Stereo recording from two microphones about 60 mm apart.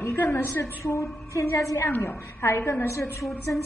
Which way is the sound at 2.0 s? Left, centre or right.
Left.